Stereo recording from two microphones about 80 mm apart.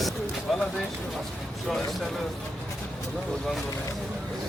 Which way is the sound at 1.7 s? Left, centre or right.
Centre.